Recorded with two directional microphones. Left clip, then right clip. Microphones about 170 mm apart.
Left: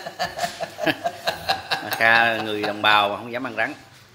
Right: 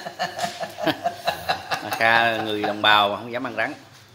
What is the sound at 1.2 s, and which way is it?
Chuckle, 30° left (ahead or behind).